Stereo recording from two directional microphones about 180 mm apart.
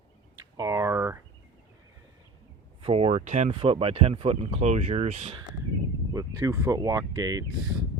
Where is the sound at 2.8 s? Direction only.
35° right (ahead or behind).